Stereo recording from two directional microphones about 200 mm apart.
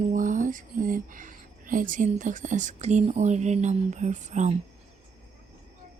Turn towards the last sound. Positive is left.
turn(degrees=-35)  # may be behind; listen again after turning